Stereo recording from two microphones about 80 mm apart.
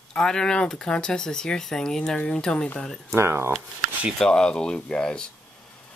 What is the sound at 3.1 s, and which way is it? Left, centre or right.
Speech, right.